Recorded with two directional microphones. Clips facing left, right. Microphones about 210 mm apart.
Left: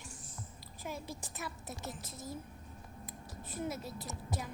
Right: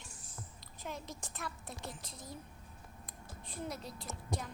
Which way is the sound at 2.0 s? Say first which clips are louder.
Left 3 dB; 50° left (ahead or behind).